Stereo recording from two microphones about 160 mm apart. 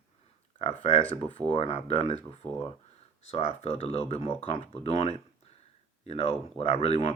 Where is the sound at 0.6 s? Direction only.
45° left (ahead or behind).